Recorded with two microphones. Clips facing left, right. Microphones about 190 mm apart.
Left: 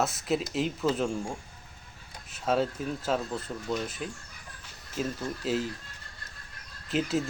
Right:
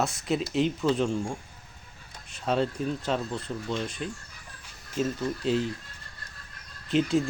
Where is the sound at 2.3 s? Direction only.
5° left (ahead or behind).